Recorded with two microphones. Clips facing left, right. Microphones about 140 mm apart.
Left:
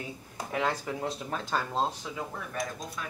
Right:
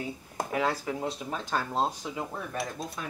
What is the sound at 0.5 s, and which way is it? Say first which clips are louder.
Speech: right 1 dB; 5° right (ahead or behind).